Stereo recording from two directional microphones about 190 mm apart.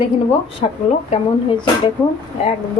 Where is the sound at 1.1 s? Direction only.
25° left (ahead or behind).